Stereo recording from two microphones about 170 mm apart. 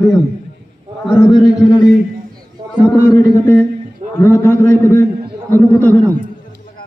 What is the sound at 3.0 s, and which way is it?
Speech, 10° left (ahead or behind).